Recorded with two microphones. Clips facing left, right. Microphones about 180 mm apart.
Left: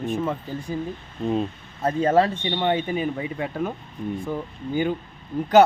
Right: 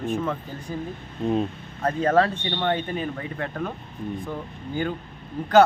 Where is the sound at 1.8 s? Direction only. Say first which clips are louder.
Left 1 dB; 10° left (ahead or behind).